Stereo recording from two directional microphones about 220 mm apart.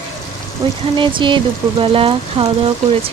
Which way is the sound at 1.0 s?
20° right (ahead or behind).